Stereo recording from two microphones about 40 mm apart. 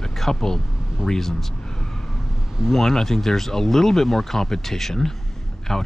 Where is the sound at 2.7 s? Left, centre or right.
Centre.